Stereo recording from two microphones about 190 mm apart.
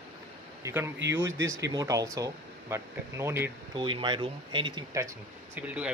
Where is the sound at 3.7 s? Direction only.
25° right (ahead or behind).